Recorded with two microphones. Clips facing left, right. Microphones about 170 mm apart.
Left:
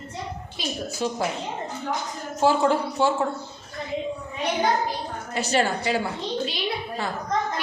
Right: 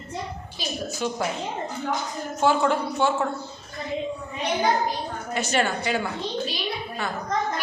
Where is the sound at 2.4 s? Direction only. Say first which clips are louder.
Left 1 dB; 30° left (ahead or behind).